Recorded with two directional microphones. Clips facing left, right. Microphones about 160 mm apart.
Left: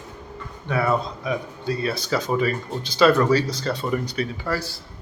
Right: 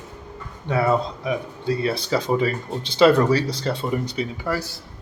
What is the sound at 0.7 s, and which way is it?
Speech, 25° right (ahead or behind).